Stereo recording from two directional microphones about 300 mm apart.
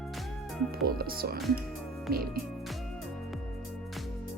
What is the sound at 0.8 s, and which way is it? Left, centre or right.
Speech, right.